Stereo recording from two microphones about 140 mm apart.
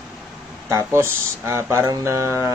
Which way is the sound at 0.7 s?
20° right (ahead or behind).